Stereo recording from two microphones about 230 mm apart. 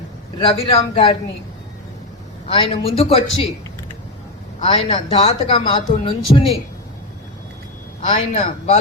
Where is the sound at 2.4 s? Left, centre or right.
Left.